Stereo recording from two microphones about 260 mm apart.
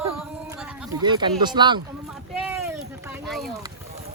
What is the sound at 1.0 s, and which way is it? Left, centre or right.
Speech, centre.